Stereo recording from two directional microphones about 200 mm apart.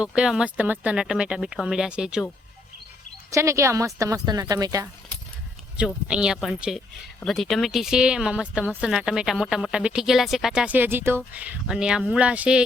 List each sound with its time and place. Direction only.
0.0 s speech: 5° right (ahead or behind)
3.3 s a woman's voice: 15° right (ahead or behind)
5.7 s a woman's voice: 5° right (ahead or behind)